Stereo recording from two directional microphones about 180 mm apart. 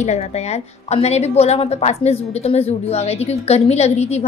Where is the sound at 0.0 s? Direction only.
40° left (ahead or behind).